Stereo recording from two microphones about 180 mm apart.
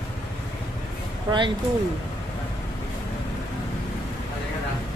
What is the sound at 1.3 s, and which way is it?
Speech, 25° right (ahead or behind).